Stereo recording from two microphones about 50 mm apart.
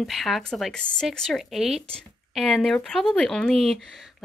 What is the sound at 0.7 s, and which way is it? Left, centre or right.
Speech, centre.